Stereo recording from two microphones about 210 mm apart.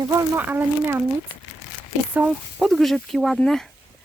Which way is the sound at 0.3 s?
10° right (ahead or behind).